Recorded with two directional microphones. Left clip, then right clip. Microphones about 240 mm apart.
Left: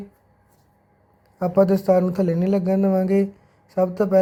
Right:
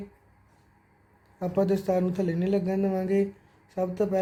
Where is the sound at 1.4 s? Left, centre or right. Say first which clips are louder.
Left 8 dB; left.